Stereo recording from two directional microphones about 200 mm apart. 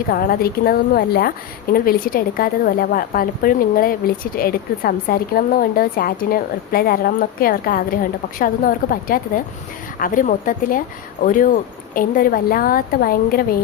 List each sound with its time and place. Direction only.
0.1 s a woman's voice: 45° left (ahead or behind)